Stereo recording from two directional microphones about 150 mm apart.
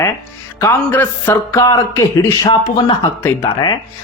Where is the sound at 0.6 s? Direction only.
15° left (ahead or behind).